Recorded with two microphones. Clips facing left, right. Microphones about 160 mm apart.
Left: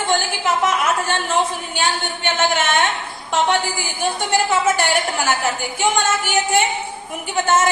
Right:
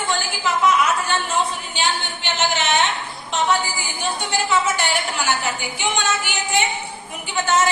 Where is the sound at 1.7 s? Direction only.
50° left (ahead or behind).